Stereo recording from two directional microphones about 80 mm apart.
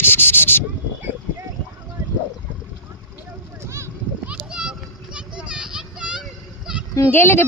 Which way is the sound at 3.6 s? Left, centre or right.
Right.